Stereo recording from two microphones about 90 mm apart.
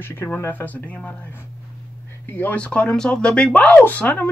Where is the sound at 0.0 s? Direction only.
25° left (ahead or behind).